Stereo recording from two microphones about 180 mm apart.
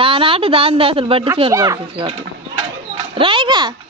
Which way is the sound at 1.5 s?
20° right (ahead or behind).